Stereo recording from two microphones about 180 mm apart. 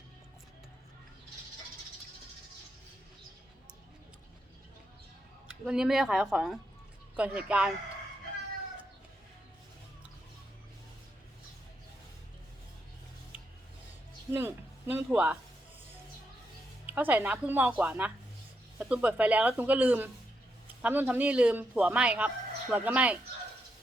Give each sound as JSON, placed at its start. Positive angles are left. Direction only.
{"t": 5.5, "sound": "a man's voice", "side_deg": -5}
{"t": 14.3, "sound": "a man's voice", "side_deg": -10}
{"t": 16.8, "sound": "a man's voice", "side_deg": -10}